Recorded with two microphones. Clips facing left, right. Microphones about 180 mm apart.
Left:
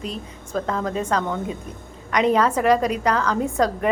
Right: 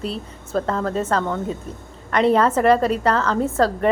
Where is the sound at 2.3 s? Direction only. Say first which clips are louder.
Right 2 dB; 10° left (ahead or behind).